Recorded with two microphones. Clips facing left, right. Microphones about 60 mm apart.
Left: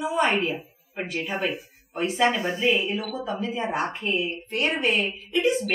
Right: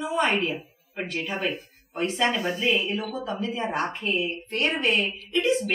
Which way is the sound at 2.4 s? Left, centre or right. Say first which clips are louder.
Even; left.